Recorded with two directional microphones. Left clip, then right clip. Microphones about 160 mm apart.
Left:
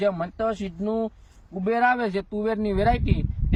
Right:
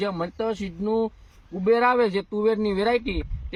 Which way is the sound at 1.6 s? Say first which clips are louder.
Right 2 dB; 35° left (ahead or behind).